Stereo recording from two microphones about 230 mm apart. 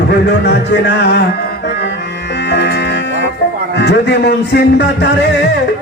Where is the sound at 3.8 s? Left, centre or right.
Left.